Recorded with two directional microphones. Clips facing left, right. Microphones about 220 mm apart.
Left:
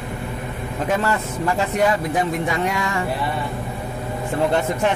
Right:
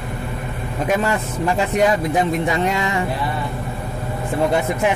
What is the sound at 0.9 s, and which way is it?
A man's voice, 15° right (ahead or behind).